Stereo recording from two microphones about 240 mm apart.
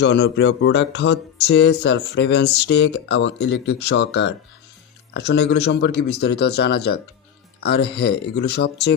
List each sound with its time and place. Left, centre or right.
0.0 s speech: left